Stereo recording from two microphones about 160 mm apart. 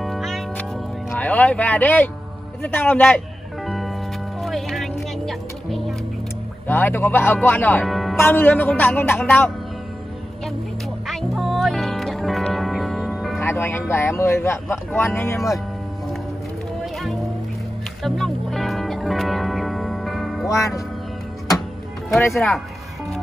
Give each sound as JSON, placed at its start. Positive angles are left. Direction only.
{"t": 0.0, "sound": "music", "side_deg": 0}
{"t": 1.1, "sound": "speech", "side_deg": 10}
{"t": 3.6, "sound": "music", "side_deg": 0}
{"t": 6.7, "sound": "speech", "side_deg": 15}
{"t": 7.8, "sound": "music", "side_deg": 0}
{"t": 8.2, "sound": "speech", "side_deg": 10}
{"t": 11.1, "sound": "music", "side_deg": 0}
{"t": 13.4, "sound": "speech", "side_deg": 15}
{"t": 16.8, "sound": "music", "side_deg": 0}
{"t": 20.4, "sound": "speech", "side_deg": 20}
{"t": 22.3, "sound": "speech", "side_deg": 0}